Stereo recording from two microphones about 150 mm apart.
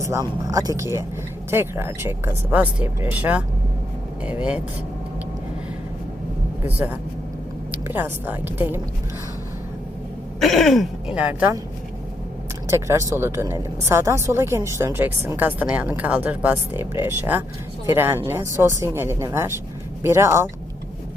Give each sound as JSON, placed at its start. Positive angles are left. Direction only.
{"t": 0.0, "sound": "a woman's voice", "side_deg": -20}
{"t": 6.7, "sound": "a woman's voice", "side_deg": -10}
{"t": 10.4, "sound": "speech", "side_deg": 0}
{"t": 12.6, "sound": "a woman's voice", "side_deg": -20}